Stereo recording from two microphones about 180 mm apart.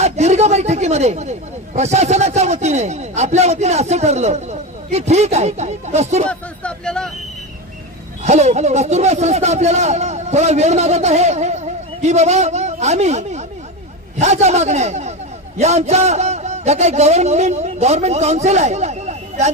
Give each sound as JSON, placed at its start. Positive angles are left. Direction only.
{"t": 0.0, "sound": "a man's voice", "side_deg": -35}
{"t": 6.2, "sound": "speech", "side_deg": 5}
{"t": 8.2, "sound": "a man's voice", "side_deg": -40}